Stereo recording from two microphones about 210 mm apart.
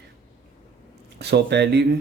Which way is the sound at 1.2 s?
55° right (ahead or behind).